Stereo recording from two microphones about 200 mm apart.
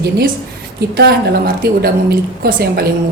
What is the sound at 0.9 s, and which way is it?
A woman's voice, 50° right (ahead or behind).